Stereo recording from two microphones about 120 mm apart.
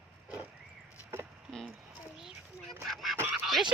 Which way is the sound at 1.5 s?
5° left (ahead or behind).